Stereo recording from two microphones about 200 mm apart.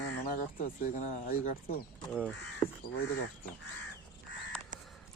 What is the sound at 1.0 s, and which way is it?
Speech, 45° left (ahead or behind).